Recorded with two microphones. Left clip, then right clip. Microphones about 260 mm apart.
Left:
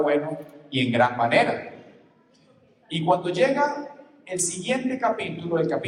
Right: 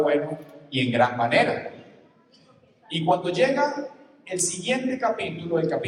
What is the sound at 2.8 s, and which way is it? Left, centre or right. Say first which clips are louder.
A woman's voice: even; left.